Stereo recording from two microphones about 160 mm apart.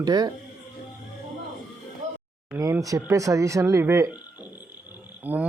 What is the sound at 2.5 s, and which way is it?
Speech, 20° right (ahead or behind).